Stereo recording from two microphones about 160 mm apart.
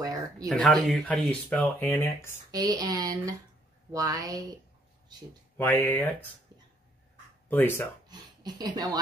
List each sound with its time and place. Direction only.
0.0 s a sound: 20° right (ahead or behind)
0.5 s speech: 5° left (ahead or behind)
2.5 s speech: 25° right (ahead or behind)
5.6 s speech: 15° left (ahead or behind)
7.4 s speech: 10° left (ahead or behind)
8.1 s speech: 25° right (ahead or behind)